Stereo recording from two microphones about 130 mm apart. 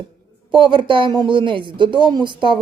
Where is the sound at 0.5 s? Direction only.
40° right (ahead or behind).